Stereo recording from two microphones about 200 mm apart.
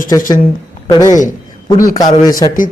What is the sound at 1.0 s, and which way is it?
Speech, 40° left (ahead or behind).